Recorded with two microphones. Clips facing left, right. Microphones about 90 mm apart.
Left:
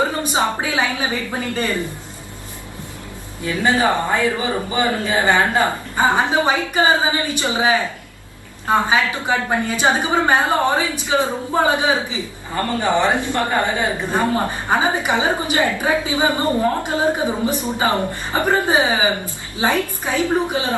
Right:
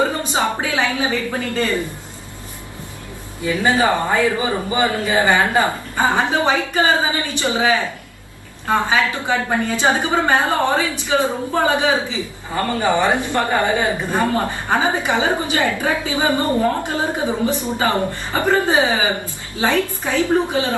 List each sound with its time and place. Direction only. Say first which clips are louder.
0.3 s a woman's voice: even; 20° left (ahead or behind)
3.4 s speech: right 1 dB; 15° right (ahead or behind)
5.6 s a woman's voice: left 1 dB; 20° left (ahead or behind)
12.8 s speech: even; 15° right (ahead or behind)
14.1 s a woman's voice: even; 20° left (ahead or behind)